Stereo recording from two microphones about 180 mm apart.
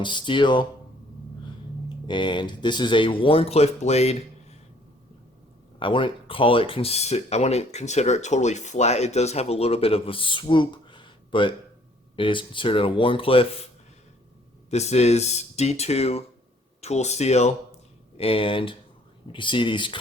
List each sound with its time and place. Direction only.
0.0 s speech: 25° left (ahead or behind)
2.0 s speech: 25° left (ahead or behind)
5.8 s speech: 30° left (ahead or behind)
14.7 s speech: 35° left (ahead or behind)